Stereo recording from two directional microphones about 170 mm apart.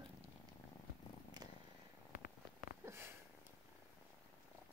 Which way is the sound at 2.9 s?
15° right (ahead or behind).